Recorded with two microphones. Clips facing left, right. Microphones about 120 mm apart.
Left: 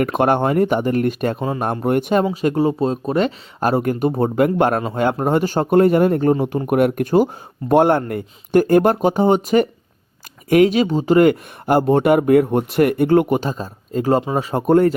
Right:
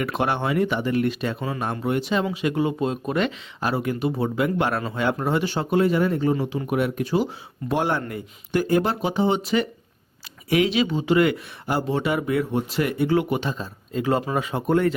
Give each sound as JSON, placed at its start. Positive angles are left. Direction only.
{"t": 0.0, "sound": "speech", "side_deg": 50}
{"t": 1.4, "sound": "speech", "side_deg": 35}
{"t": 1.6, "sound": "speech", "side_deg": 50}
{"t": 2.2, "sound": "speech", "side_deg": 40}
{"t": 14.2, "sound": "speech", "side_deg": 25}
{"t": 14.4, "sound": "speech", "side_deg": 40}